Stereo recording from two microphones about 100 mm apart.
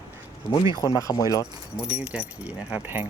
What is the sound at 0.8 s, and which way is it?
Speech, 35° left (ahead or behind).